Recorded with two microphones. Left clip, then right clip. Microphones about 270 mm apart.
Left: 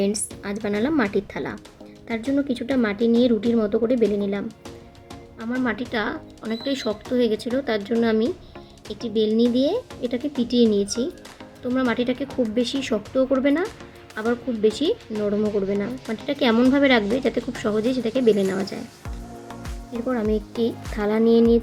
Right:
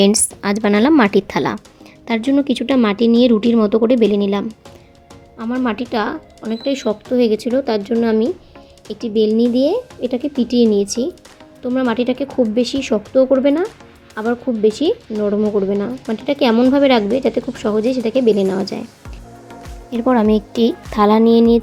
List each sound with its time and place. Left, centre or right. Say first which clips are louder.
0.0 s a woman's voice: right 10 dB; right; by 18.8 s centre
19.5 s music: right 8 dB; centre
20.1 s a woman's voice: right 9 dB; right